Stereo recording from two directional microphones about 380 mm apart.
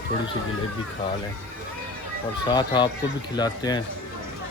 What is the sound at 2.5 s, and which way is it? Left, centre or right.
Speech, centre.